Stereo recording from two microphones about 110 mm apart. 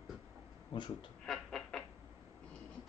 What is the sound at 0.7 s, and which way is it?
Speech, 45° left (ahead or behind).